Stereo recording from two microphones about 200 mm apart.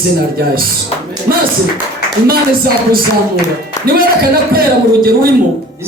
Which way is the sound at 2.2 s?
50° right (ahead or behind).